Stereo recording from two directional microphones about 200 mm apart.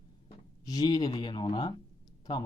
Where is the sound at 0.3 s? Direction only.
20° left (ahead or behind).